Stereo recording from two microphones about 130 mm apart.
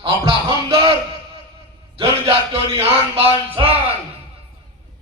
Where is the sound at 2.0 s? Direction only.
50° right (ahead or behind).